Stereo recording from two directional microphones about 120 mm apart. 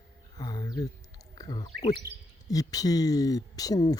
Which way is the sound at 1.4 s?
35° left (ahead or behind).